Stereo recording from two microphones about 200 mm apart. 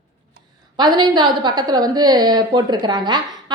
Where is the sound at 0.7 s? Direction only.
20° right (ahead or behind).